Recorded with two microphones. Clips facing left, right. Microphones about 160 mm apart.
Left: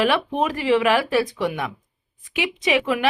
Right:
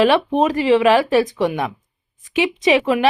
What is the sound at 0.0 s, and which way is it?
Speech, 25° right (ahead or behind).